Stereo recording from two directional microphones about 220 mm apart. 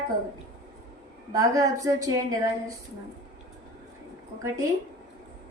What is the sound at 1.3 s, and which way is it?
A woman's voice, 15° right (ahead or behind).